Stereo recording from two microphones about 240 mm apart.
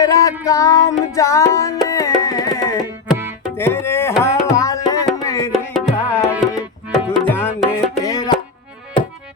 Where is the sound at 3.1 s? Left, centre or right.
Centre.